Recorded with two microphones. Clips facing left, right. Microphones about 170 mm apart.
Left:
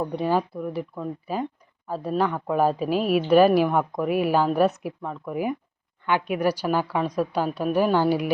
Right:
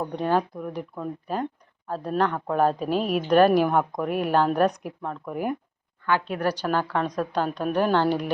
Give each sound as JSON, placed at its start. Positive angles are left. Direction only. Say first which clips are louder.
{"t": 0.2, "sound": "a woman's voice", "louder": "right 2 dB", "side_deg": 5}
{"t": 6.1, "sound": "a woman's voice", "louder": "left 2 dB", "side_deg": 15}